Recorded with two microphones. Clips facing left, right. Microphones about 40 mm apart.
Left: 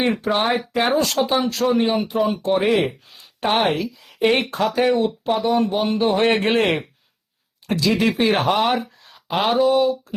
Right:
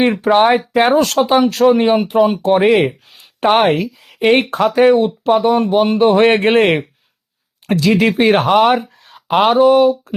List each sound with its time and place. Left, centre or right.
0.0 s speech: right
4.2 s speech: right